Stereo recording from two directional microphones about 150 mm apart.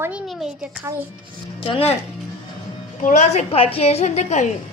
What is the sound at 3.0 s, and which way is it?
A woman's voice, 55° left (ahead or behind).